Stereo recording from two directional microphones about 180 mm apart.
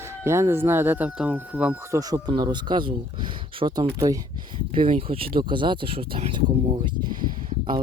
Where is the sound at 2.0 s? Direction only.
20° right (ahead or behind).